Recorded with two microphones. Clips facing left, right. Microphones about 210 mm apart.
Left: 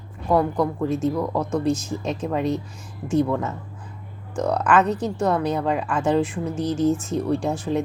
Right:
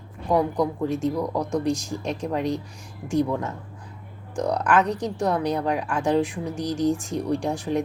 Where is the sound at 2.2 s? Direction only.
5° left (ahead or behind).